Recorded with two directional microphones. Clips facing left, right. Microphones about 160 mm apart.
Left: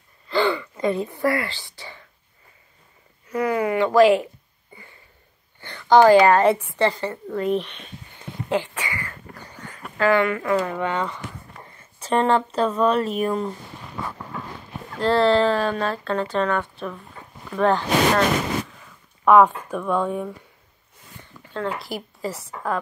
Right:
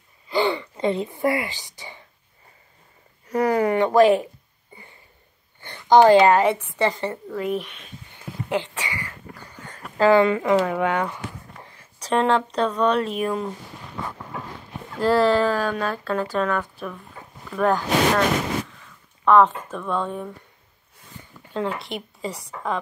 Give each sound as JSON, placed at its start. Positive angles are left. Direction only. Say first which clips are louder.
{"t": 0.3, "sound": "speech", "louder": "left 1 dB", "side_deg": -20}
{"t": 3.3, "sound": "speech", "louder": "right 2 dB", "side_deg": -40}
{"t": 5.6, "sound": "a sound", "louder": "even", "side_deg": -15}
{"t": 6.4, "sound": "speech", "louder": "left 3 dB", "side_deg": 0}
{"t": 6.8, "sound": "speech", "louder": "left 1 dB", "side_deg": -20}
{"t": 7.3, "sound": "speech", "louder": "left 6 dB", "side_deg": -5}
{"t": 8.5, "sound": "speech", "louder": "left 2 dB", "side_deg": -15}
{"t": 11.6, "sound": "speech", "louder": "left 1 dB", "side_deg": 0}
{"t": 15.0, "sound": "speech", "louder": "even", "side_deg": -5}
{"t": 19.2, "sound": "speech", "louder": "left 1 dB", "side_deg": 10}
{"t": 21.7, "sound": "speech", "louder": "left 1 dB", "side_deg": 0}